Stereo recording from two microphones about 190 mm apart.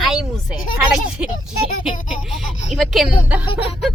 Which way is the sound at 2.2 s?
Centre (ahead or behind).